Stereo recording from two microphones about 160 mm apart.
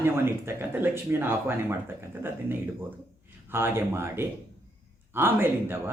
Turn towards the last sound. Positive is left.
turn(degrees=-15)  # may be behind; listen again after turning